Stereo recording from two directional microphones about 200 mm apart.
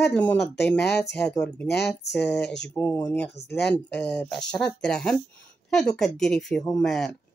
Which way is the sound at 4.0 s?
5° left (ahead or behind).